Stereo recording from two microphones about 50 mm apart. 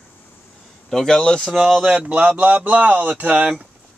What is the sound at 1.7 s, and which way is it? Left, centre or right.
Speech, centre.